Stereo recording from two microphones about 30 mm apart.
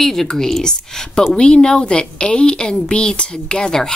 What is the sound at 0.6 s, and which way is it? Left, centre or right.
A woman's voice, left.